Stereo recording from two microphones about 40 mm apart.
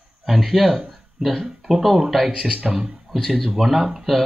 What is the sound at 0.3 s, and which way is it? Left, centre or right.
A man's voice, centre.